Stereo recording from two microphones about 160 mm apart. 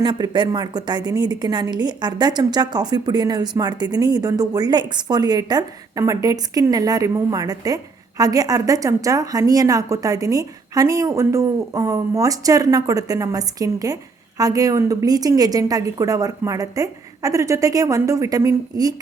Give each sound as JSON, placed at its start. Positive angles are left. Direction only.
{"t": 0.0, "sound": "a woman's voice", "side_deg": -30}